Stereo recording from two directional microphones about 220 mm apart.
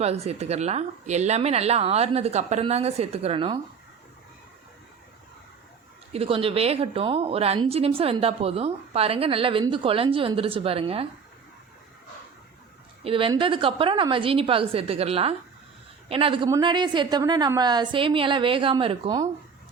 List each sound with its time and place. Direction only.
0.0 s speech: 30° right (ahead or behind)
6.1 s speech: 25° right (ahead or behind)
13.1 s speech: 25° right (ahead or behind)